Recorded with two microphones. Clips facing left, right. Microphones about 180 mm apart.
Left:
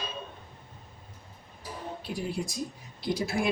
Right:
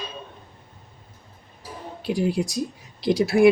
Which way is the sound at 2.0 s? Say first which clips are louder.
Right 11 dB; 85° right.